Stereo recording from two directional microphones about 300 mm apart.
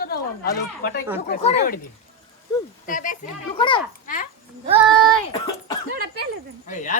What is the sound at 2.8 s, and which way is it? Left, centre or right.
Speech, left.